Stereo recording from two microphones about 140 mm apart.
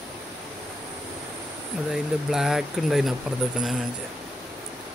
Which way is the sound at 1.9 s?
5° right (ahead or behind).